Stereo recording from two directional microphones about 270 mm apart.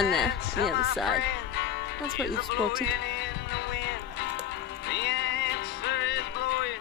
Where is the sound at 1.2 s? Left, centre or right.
Left.